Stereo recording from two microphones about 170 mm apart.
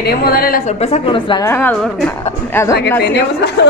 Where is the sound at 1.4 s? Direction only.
10° left (ahead or behind).